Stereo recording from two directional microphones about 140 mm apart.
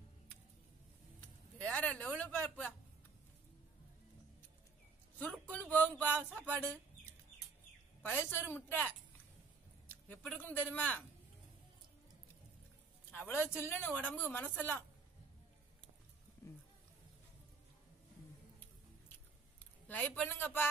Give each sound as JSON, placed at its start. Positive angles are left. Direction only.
{"t": 1.6, "sound": "speech", "side_deg": 10}
{"t": 5.3, "sound": "speech", "side_deg": 10}
{"t": 6.4, "sound": "speech", "side_deg": -15}
{"t": 8.0, "sound": "speech", "side_deg": 15}
{"t": 10.2, "sound": "speech", "side_deg": 10}
{"t": 13.1, "sound": "speech", "side_deg": 15}
{"t": 19.9, "sound": "speech", "side_deg": 10}